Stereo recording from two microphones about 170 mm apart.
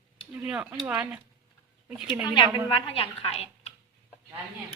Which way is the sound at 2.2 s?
30° left (ahead or behind).